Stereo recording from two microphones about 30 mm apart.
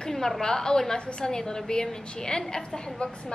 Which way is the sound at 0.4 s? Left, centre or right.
Left.